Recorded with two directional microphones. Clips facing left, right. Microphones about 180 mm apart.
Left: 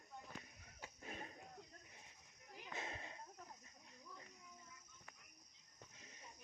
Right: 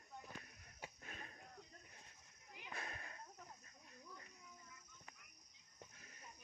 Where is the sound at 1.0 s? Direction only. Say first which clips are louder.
Left 9 dB; 25° left (ahead or behind).